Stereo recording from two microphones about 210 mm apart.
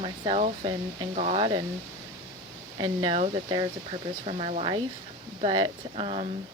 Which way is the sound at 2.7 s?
25° right (ahead or behind).